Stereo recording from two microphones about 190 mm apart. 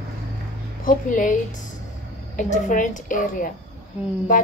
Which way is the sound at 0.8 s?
45° left (ahead or behind).